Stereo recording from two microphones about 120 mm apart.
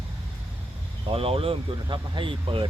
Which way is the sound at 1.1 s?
50° right (ahead or behind).